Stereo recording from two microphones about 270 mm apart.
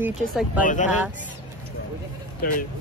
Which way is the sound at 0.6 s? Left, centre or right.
Left.